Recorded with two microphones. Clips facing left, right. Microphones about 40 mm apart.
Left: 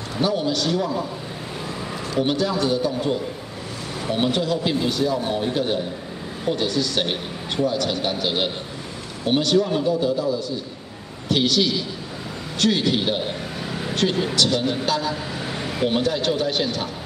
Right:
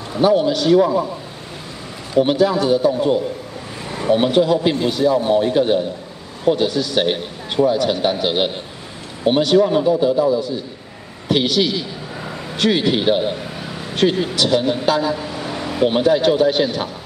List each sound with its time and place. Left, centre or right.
0.2 s a man's voice: centre
2.1 s a man's voice: centre